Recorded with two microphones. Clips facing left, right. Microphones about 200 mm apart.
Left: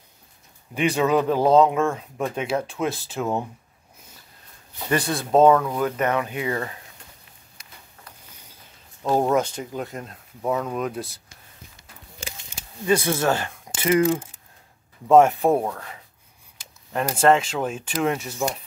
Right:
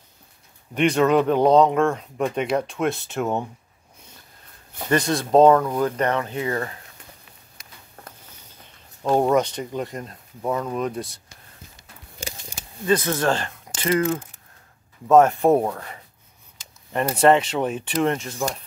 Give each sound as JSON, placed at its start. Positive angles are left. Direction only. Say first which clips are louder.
{"t": 0.7, "sound": "speech", "louder": "right 3 dB", "side_deg": 5}
{"t": 5.1, "sound": "speech", "louder": "right 1 dB", "side_deg": 5}
{"t": 5.6, "sound": "speech", "louder": "right 2 dB", "side_deg": -10}
{"t": 5.9, "sound": "speech", "louder": "even", "side_deg": 10}
{"t": 8.3, "sound": "a sound", "louder": "right 1 dB", "side_deg": 10}
{"t": 9.3, "sound": "speech", "louder": "right 2 dB", "side_deg": 5}
{"t": 12.2, "sound": "a sound", "louder": "right 4 dB", "side_deg": -40}
{"t": 12.8, "sound": "speech", "louder": "even", "side_deg": 10}
{"t": 15.4, "sound": "speech", "louder": "right 3 dB", "side_deg": -5}